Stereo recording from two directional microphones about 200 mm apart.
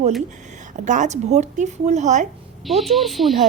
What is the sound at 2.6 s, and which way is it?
Speech, centre (ahead or behind).